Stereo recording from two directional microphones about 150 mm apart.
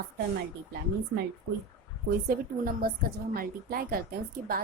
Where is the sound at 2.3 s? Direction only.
75° right (ahead or behind).